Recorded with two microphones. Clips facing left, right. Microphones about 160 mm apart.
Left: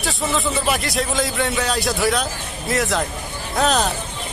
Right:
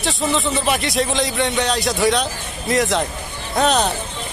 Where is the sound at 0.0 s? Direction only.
Centre (ahead or behind).